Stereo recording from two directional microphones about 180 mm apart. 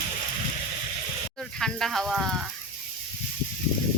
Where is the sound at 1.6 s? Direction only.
Centre (ahead or behind).